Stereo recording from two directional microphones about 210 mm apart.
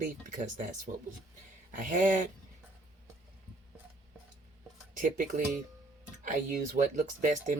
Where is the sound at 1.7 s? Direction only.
40° right (ahead or behind).